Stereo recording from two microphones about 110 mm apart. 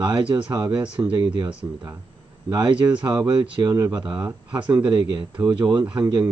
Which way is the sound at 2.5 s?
40° right (ahead or behind).